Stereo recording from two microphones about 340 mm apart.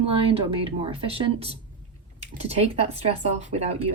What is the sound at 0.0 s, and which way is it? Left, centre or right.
Speech, centre.